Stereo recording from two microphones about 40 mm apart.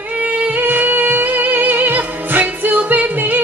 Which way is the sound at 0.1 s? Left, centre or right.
Right.